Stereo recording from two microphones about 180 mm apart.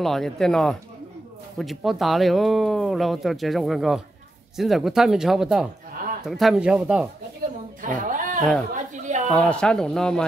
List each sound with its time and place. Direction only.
0.0 s speech: centre (ahead or behind)
7.8 s a sound: 45° right (ahead or behind)
9.3 s speech: 5° left (ahead or behind)